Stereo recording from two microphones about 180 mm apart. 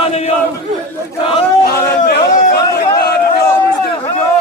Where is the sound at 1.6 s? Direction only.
55° left (ahead or behind).